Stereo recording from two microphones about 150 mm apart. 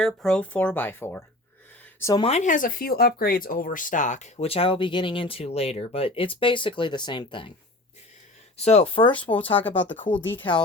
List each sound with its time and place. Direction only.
0.0 s speech: 5° left (ahead or behind); by 2.2 s 20° left (ahead or behind)
2.2 s speech: 50° left (ahead or behind); by 7.5 s 35° left (ahead or behind)
8.5 s speech: 45° left (ahead or behind)
10.1 s speech: 10° left (ahead or behind)